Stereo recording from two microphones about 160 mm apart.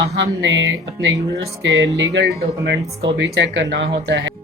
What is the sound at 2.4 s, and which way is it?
Speech, 80° right.